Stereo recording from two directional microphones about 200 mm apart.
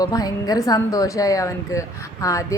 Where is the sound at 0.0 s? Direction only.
20° left (ahead or behind).